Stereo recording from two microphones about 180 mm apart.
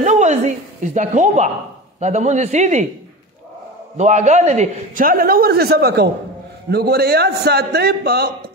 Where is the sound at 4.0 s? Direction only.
40° right (ahead or behind).